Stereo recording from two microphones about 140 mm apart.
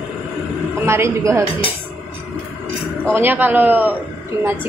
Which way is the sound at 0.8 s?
20° right (ahead or behind).